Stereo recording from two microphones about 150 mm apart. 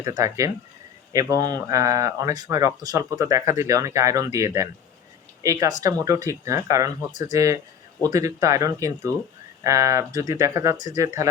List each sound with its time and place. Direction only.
0.0 s speech: 25° right (ahead or behind)
7.1 s speech: 55° left (ahead or behind)
7.3 s speech: 20° right (ahead or behind)